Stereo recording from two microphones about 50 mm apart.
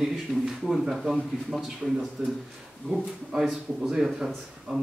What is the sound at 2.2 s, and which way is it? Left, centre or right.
Speech, centre.